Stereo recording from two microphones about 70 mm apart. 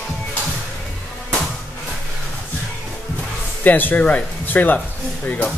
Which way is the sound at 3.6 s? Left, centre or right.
Left.